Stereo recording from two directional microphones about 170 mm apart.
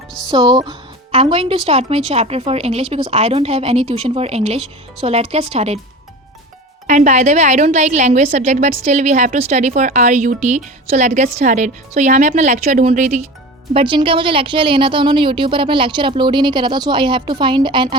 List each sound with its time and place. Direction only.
0.3 s speech: 25° right (ahead or behind)
1.1 s a woman's voice: 35° right (ahead or behind)
6.8 s a woman's voice: 45° right (ahead or behind)
13.7 s speech: 30° right (ahead or behind)